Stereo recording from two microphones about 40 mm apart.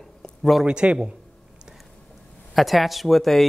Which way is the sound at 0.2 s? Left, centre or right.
Centre.